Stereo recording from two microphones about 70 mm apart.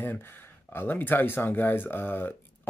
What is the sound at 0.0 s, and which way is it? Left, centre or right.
Speech, left.